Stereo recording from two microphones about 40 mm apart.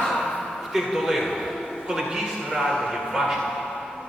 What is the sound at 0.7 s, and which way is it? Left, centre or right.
Speech, centre.